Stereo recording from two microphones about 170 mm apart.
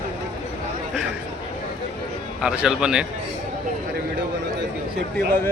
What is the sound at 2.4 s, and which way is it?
Speech, 5° right (ahead or behind).